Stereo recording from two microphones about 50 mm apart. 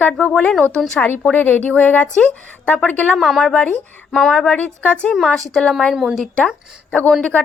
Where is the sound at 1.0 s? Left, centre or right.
Left.